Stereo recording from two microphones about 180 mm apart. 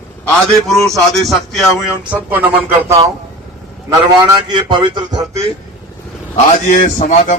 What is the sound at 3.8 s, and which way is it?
A man's voice, 20° right (ahead or behind).